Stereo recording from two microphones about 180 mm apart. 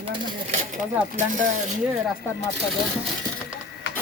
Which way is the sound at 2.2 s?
10° left (ahead or behind).